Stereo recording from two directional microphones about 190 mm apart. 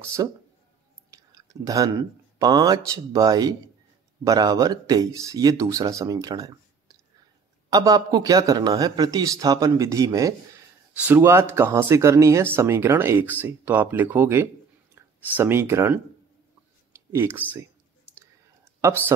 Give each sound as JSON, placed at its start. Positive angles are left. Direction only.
{"t": 0.0, "sound": "speech", "side_deg": -15}
{"t": 17.1, "sound": "speech", "side_deg": -10}
{"t": 18.8, "sound": "speech", "side_deg": -15}